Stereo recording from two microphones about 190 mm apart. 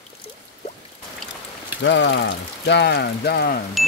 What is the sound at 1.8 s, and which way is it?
Speech, 65° left (ahead or behind).